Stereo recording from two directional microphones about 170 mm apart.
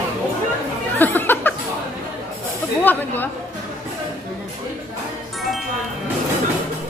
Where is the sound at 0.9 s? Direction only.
10° left (ahead or behind).